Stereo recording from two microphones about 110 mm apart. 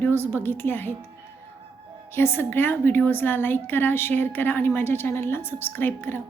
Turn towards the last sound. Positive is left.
turn(degrees=20)  # may be behind; listen again after turning